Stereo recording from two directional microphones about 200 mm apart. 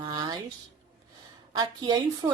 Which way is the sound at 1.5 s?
20° right (ahead or behind).